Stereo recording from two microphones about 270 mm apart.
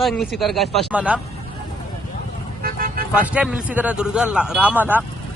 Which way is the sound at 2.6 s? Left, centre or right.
Right.